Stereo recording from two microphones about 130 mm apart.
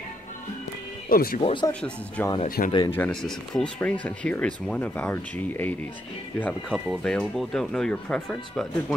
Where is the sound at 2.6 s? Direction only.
90° left.